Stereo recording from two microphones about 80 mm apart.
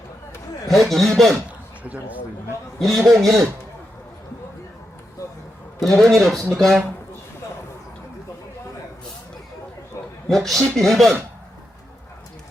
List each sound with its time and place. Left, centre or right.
0.7 s speech: centre
1.8 s speech: centre
2.7 s speech: centre
5.8 s speech: centre
10.2 s speech: centre